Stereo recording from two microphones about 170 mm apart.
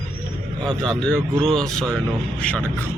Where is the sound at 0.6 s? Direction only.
5° left (ahead or behind).